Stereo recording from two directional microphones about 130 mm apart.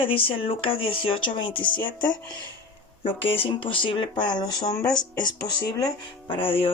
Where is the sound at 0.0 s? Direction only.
45° left (ahead or behind).